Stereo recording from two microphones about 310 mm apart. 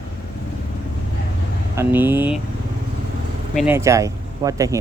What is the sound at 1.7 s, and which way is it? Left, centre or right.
Speech, centre.